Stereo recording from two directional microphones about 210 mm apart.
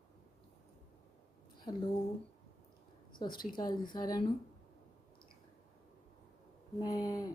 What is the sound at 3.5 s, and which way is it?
Speech, 20° left (ahead or behind).